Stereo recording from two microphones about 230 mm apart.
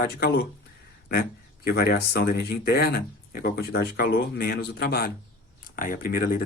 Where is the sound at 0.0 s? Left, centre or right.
Left.